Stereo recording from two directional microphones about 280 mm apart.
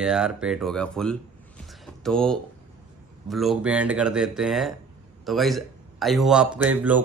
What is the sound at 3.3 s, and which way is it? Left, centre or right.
A man's voice, centre.